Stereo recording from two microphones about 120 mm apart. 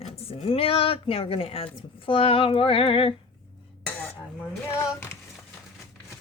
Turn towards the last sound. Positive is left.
turn(degrees=20)  # may be behind; listen again after turning